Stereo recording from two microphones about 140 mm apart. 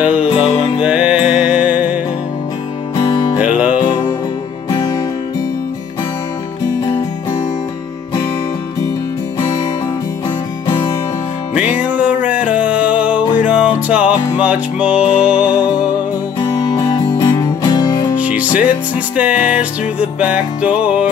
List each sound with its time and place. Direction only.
0.0 s music: 10° right (ahead or behind)
0.3 s music: 45° left (ahead or behind)
0.8 s music: 5° right (ahead or behind)
3.0 s music: 35° left (ahead or behind)
3.3 s music: 10° right (ahead or behind)
4.6 s music: 25° left (ahead or behind)
11.6 s music: 10° right (ahead or behind)
16.5 s music: 25° left (ahead or behind)
18.1 s music: 10° right (ahead or behind)